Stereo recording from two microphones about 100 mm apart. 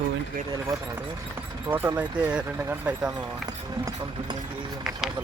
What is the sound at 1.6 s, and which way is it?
Speech, 20° right (ahead or behind).